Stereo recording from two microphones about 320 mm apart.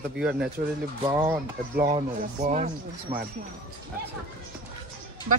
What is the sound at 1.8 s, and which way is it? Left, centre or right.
Speech, right.